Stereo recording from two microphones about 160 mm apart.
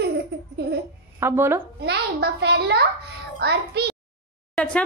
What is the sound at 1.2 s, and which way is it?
Speech, 15° right (ahead or behind).